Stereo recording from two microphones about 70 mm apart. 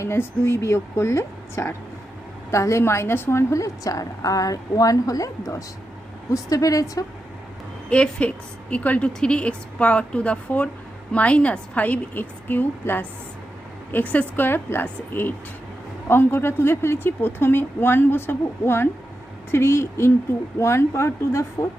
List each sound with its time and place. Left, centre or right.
0.0 s a woman's voice: left
6.3 s a woman's voice: left
7.9 s a woman's voice: centre; by 21.7 s left